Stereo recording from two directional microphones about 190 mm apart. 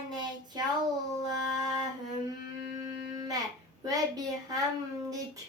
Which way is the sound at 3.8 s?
20° right (ahead or behind).